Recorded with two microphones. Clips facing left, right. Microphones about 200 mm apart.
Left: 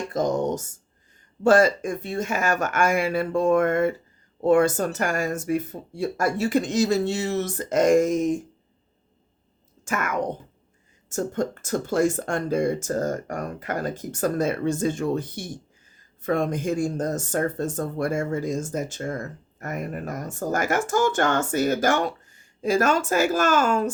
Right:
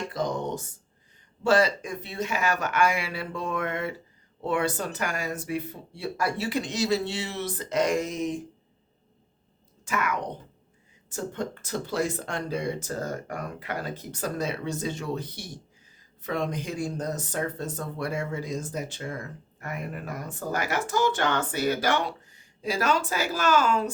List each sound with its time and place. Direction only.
0.1 s a sound: 45° left (ahead or behind)
1.5 s speech: 50° left (ahead or behind)
9.8 s speech: 50° left (ahead or behind)